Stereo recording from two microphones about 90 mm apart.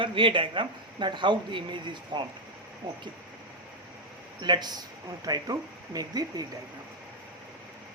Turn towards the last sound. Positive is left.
turn(degrees=-45)  # may be behind; listen again after turning